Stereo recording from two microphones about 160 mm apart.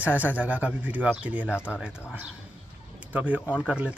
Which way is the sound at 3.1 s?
10° right (ahead or behind).